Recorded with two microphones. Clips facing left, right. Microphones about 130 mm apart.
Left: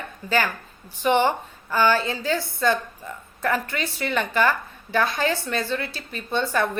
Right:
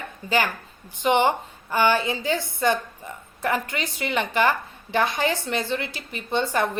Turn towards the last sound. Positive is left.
turn(degrees=-20)  # may be behind; listen again after turning